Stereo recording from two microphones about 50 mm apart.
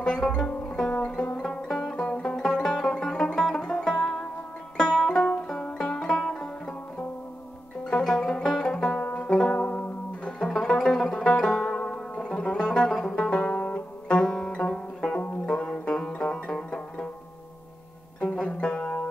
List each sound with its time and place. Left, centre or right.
0.0 s music: centre
7.8 s music: centre
9.0 s music: left
10.5 s music: centre
13.5 s music: left
14.0 s music: centre
18.2 s banjo: left